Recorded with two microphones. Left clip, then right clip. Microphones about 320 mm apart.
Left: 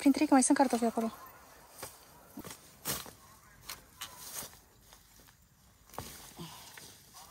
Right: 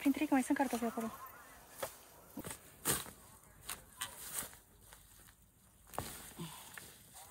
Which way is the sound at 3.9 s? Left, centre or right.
Centre.